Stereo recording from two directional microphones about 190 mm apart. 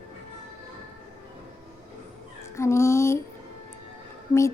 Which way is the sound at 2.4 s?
15° left (ahead or behind).